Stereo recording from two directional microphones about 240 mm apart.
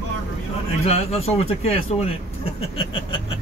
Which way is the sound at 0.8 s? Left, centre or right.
Left.